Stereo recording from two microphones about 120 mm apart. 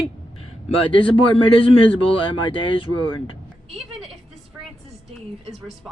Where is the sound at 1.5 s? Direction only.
50° left (ahead or behind).